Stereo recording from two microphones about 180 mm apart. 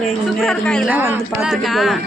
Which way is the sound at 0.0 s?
Centre (ahead or behind).